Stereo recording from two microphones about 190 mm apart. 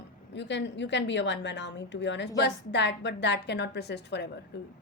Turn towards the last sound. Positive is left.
turn(degrees=65)  # may be behind; listen again after turning